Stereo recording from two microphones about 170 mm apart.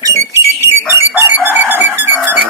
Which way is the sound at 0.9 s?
15° right (ahead or behind).